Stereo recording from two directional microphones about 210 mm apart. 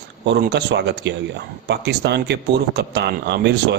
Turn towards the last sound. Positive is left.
turn(degrees=-55)  # may be behind; listen again after turning